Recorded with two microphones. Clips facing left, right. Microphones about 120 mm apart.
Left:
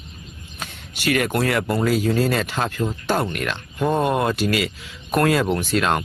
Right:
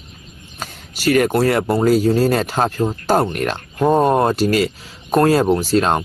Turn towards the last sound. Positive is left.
turn(degrees=-35)  # may be behind; listen again after turning